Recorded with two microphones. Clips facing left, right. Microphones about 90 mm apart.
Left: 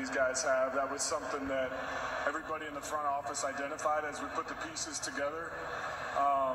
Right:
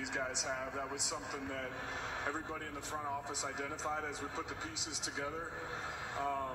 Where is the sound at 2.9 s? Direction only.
30° left (ahead or behind).